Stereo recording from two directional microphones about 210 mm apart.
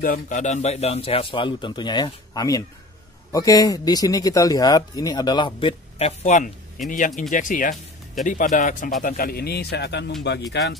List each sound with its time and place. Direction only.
0.0 s a man's voice: 40° left (ahead or behind)